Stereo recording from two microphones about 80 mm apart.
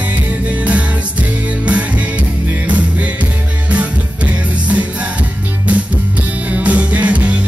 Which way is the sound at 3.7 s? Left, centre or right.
Centre.